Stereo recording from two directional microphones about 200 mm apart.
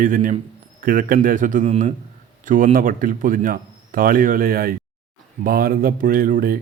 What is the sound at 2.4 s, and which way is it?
Speech, 40° right (ahead or behind).